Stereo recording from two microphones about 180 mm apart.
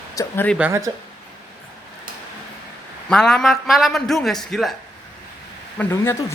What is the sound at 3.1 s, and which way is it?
A man's voice, 5° left (ahead or behind).